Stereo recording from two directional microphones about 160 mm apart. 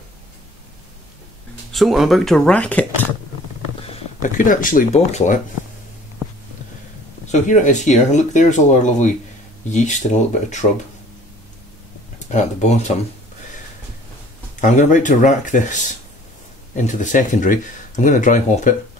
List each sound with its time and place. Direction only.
1.7 s speech: centre (ahead or behind)
4.2 s speech: 55° left (ahead or behind)
7.2 s speech: 50° left (ahead or behind)
12.3 s speech: 45° left (ahead or behind)
14.6 s speech: 50° left (ahead or behind)